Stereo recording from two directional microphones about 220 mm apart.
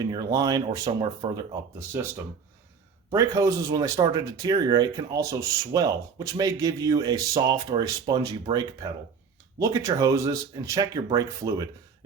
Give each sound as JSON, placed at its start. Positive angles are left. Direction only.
{"t": 0.0, "sound": "a man's voice", "side_deg": -15}